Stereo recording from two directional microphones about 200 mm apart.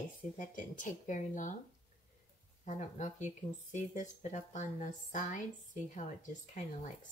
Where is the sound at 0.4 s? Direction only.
40° left (ahead or behind).